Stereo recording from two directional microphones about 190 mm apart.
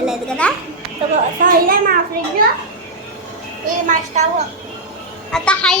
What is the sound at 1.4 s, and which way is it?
A child's voice, 50° right (ahead or behind).